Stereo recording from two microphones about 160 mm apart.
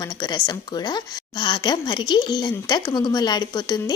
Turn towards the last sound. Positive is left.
turn(degrees=25)  # may be behind; listen again after turning